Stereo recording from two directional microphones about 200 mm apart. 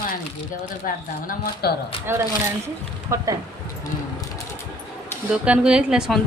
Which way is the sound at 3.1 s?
15° right (ahead or behind).